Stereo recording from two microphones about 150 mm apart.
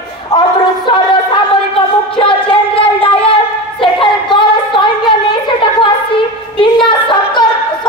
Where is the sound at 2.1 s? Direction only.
35° left (ahead or behind).